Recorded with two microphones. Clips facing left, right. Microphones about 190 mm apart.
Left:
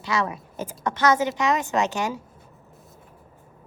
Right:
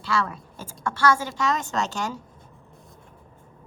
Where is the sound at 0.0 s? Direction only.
20° left (ahead or behind).